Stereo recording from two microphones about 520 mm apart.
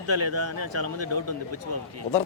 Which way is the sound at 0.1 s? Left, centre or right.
Right.